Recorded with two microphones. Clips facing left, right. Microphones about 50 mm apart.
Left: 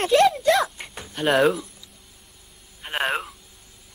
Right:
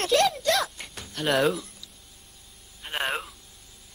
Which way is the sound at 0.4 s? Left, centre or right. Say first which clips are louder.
Left 5 dB; centre.